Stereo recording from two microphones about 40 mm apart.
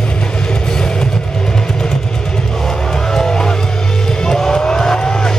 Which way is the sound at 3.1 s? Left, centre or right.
Centre.